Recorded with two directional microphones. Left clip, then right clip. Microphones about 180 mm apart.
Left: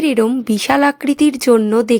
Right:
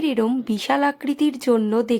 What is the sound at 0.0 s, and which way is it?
Speech, 25° left (ahead or behind).